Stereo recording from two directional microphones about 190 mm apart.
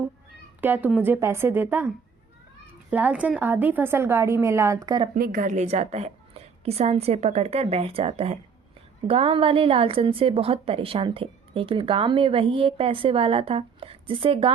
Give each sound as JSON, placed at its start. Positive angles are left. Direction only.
{"t": 0.6, "sound": "a woman's voice", "side_deg": -10}
{"t": 2.9, "sound": "a woman's voice", "side_deg": -5}
{"t": 5.1, "sound": "a woman's voice", "side_deg": -50}